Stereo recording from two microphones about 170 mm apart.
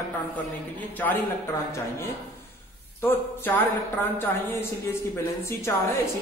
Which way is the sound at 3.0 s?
10° left (ahead or behind).